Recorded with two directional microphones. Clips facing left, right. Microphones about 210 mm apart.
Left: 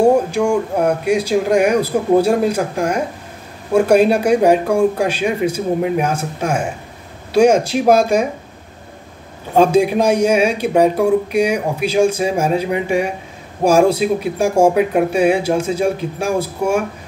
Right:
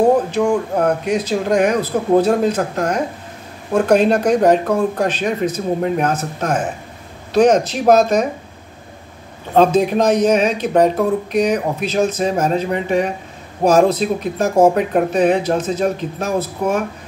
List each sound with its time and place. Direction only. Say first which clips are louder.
0.0 s a man's voice: left 1 dB; 10° left (ahead or behind)
9.5 s a man's voice: left 1 dB; 10° left (ahead or behind)